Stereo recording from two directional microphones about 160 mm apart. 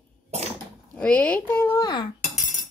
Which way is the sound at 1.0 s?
10° left (ahead or behind).